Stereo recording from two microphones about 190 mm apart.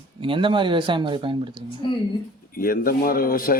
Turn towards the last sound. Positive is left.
turn(degrees=50)  # may be behind; listen again after turning